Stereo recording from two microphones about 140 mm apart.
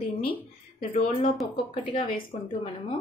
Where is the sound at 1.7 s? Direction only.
40° left (ahead or behind).